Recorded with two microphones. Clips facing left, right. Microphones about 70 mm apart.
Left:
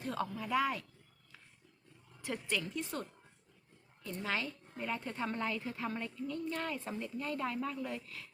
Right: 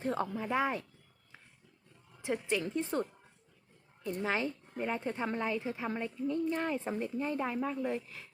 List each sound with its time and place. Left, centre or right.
0.0 s a woman's voice: right
2.2 s a woman's voice: right